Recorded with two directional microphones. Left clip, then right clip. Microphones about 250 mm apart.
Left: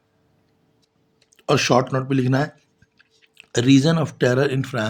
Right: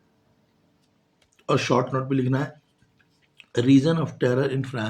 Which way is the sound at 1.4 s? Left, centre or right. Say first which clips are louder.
Left 4 dB; left.